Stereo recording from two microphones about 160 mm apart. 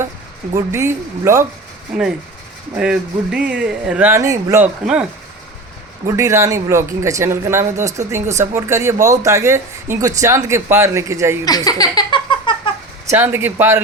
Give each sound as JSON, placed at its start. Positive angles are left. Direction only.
{"t": 0.5, "sound": "speech", "side_deg": -15}
{"t": 1.9, "sound": "speech", "side_deg": -5}
{"t": 4.3, "sound": "speech", "side_deg": -20}
{"t": 4.6, "sound": "speech", "side_deg": -5}
{"t": 6.1, "sound": "speech", "side_deg": -20}
{"t": 11.4, "sound": "giggle", "side_deg": 25}
{"t": 13.1, "sound": "speech", "side_deg": -15}